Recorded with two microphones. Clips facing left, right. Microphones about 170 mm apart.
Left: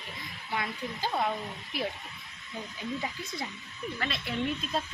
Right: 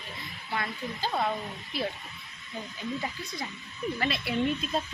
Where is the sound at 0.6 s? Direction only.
10° left (ahead or behind).